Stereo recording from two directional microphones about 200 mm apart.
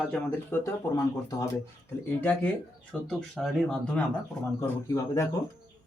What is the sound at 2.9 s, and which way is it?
Speech, centre (ahead or behind).